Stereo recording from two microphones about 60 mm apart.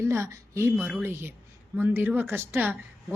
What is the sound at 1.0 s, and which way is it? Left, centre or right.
Speech, right.